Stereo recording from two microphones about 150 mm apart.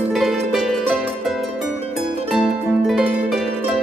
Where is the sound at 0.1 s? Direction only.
Centre (ahead or behind).